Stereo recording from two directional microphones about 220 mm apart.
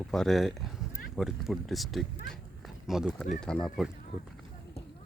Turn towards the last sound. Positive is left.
turn(degrees=0)  # may be behind; listen again after turning